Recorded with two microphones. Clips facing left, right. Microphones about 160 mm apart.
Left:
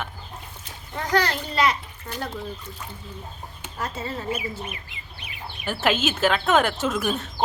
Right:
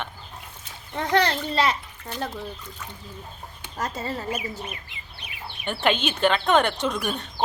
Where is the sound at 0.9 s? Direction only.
25° right (ahead or behind).